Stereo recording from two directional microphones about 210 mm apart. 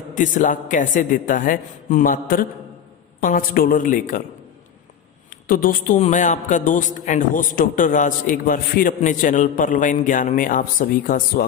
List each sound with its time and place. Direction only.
0.1 s a man's voice: 40° left (ahead or behind)
5.3 s a man's voice: 40° left (ahead or behind)